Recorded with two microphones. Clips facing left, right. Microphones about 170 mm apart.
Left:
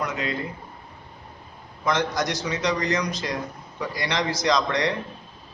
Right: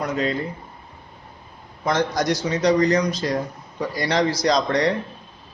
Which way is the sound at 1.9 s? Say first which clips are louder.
Right 3 dB; 35° right (ahead or behind).